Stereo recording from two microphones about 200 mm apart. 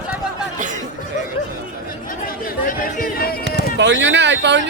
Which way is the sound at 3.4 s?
60° right (ahead or behind).